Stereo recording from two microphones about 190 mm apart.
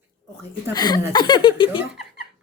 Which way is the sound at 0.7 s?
20° left (ahead or behind).